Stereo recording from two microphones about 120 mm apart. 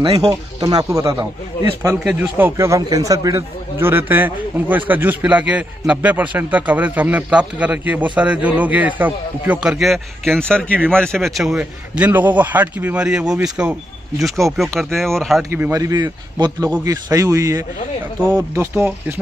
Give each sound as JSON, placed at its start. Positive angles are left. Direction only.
{"t": 0.0, "sound": "speech", "side_deg": -55}
{"t": 0.6, "sound": "a man's voice", "side_deg": -35}
{"t": 2.0, "sound": "a man's voice", "side_deg": -15}
{"t": 15.5, "sound": "a man's voice", "side_deg": -20}